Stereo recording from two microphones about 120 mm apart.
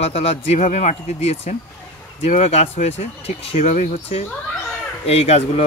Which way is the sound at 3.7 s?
85° left.